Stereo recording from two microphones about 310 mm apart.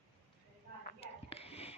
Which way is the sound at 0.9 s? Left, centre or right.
Centre.